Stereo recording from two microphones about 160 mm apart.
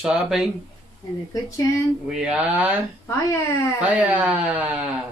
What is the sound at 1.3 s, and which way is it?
Speech, 20° left (ahead or behind).